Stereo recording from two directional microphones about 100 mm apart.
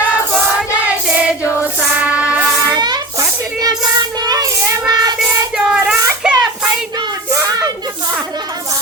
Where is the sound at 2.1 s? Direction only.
10° right (ahead or behind).